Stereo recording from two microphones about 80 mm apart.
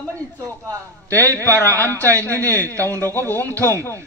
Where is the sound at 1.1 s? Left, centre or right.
Left.